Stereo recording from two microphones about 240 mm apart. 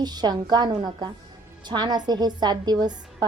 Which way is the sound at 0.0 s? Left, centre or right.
Centre.